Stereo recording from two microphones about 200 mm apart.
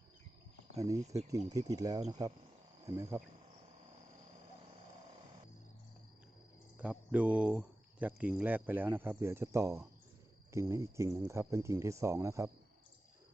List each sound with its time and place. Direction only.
0.8 s speech: 15° right (ahead or behind)
6.7 s speech: 5° right (ahead or behind)